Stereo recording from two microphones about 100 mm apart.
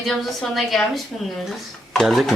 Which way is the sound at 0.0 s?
Centre (ahead or behind).